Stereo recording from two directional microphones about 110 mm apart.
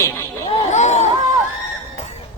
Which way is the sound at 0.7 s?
90° left.